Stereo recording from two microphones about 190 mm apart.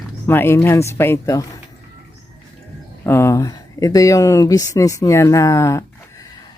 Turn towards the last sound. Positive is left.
turn(degrees=15)  # may be behind; listen again after turning